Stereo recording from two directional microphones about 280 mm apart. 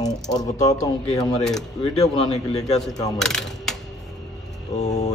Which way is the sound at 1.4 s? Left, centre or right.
Centre.